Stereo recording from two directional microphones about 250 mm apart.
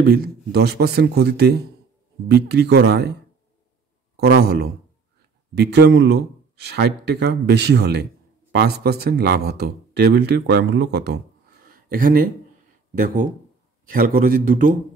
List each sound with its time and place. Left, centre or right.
0.0 s speech: right
4.2 s speech: right
11.6 s a sound: right
12.9 s speech: right